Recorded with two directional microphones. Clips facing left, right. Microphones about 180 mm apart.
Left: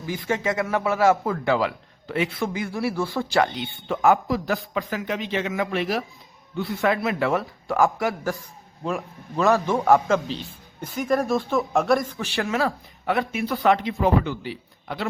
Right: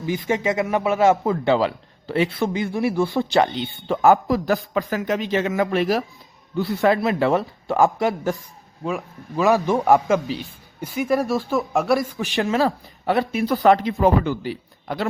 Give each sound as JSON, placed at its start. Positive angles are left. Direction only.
{"t": 0.0, "sound": "a man's voice", "side_deg": -20}
{"t": 3.8, "sound": "a man's voice", "side_deg": -40}
{"t": 8.8, "sound": "a man's voice", "side_deg": -5}
{"t": 12.1, "sound": "a man's voice", "side_deg": -15}